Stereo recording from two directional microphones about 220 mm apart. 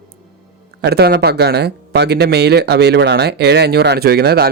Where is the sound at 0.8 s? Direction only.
45° right (ahead or behind).